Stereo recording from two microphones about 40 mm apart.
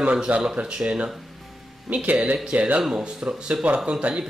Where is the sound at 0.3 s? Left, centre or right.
Right.